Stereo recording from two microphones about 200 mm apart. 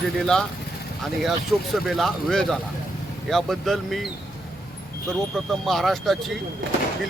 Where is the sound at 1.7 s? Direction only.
Centre (ahead or behind).